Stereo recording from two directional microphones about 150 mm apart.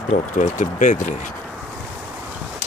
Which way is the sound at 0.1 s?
55° left (ahead or behind).